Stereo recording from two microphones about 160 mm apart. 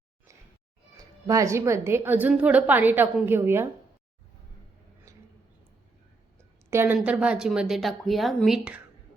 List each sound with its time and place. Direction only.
0.9 s a woman's voice: 20° right (ahead or behind)
5.1 s a sound: 20° right (ahead or behind)
6.7 s speech: 15° right (ahead or behind)